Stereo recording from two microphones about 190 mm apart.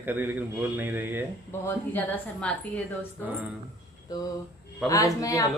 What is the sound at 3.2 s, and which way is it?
Speech, 10° right (ahead or behind).